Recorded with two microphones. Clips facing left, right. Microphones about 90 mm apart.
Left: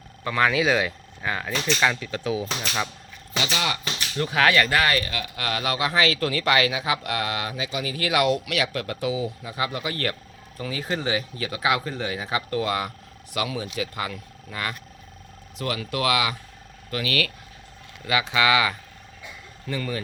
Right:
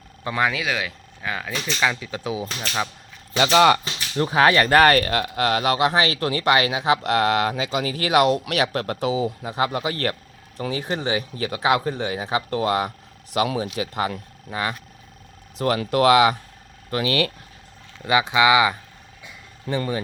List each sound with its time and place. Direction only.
0.3 s speech: 20° right (ahead or behind)
0.5 s speech: 5° left (ahead or behind); by 2.6 s 15° right (ahead or behind)
3.3 s speech: 50° right (ahead or behind)
4.2 s speech: 30° right (ahead or behind)
4.7 s speech: 50° right (ahead or behind)
5.3 s speech: 35° right (ahead or behind)
6.7 s speech: 35° right (ahead or behind)
14.5 s speech: 20° right (ahead or behind)
15.5 s speech: 40° right (ahead or behind)